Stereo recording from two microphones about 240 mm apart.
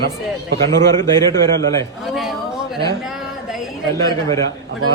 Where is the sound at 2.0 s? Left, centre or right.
Centre.